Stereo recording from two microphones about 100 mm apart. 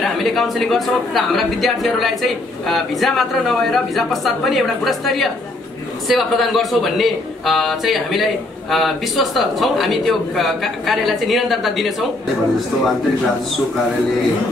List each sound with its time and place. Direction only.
0.0 s speech: centre (ahead or behind)